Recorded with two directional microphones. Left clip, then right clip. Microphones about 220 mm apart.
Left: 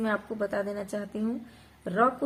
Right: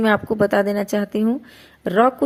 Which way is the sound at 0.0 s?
35° right (ahead or behind).